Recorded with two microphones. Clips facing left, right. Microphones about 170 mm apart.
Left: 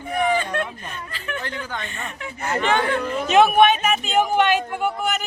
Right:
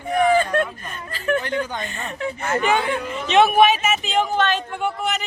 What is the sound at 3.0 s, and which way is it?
Speech, 45° left (ahead or behind).